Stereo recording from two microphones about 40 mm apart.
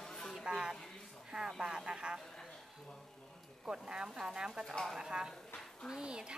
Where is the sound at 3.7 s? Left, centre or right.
Right.